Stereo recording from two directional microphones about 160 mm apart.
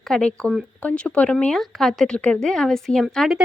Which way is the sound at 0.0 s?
5° left (ahead or behind).